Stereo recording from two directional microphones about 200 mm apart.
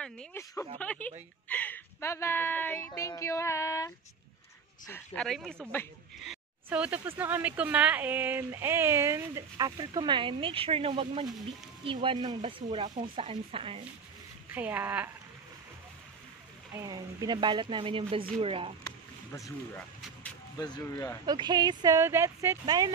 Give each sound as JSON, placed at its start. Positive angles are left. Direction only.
{"t": 0.0, "sound": "a woman's voice", "side_deg": 10}
{"t": 6.2, "sound": "speech", "side_deg": -5}
{"t": 14.5, "sound": "speech", "side_deg": -10}
{"t": 16.7, "sound": "speech", "side_deg": -20}
{"t": 18.9, "sound": "a sound", "side_deg": 15}
{"t": 20.5, "sound": "a woman's voice", "side_deg": 20}
{"t": 21.3, "sound": "speech", "side_deg": -20}